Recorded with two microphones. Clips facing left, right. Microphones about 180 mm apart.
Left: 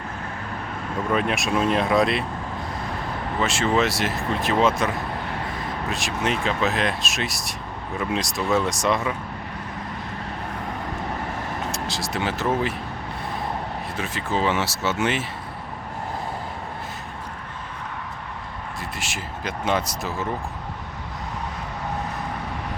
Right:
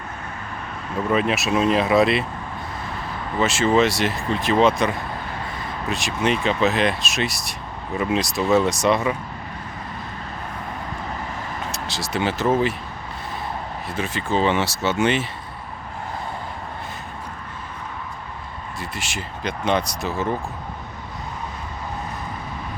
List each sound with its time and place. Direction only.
1.1 s speech: centre (ahead or behind)
3.4 s speech: centre (ahead or behind)
11.7 s speech: centre (ahead or behind)
13.9 s speech: centre (ahead or behind)
18.8 s speech: centre (ahead or behind)